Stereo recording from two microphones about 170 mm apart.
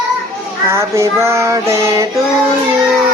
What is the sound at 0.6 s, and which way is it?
Female singing, 15° right (ahead or behind).